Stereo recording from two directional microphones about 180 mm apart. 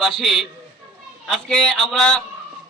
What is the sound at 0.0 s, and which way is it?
A man's voice, centre (ahead or behind).